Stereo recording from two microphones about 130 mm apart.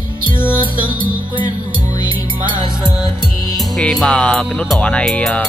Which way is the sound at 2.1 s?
35° right (ahead or behind).